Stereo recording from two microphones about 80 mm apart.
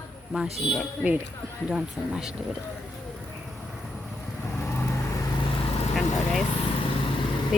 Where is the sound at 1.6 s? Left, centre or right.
Centre.